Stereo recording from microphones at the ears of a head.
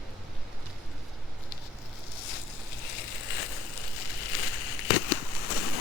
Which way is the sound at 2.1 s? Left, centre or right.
Left.